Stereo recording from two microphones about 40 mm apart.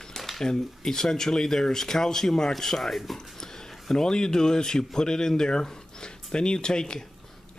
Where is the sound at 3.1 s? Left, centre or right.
Centre.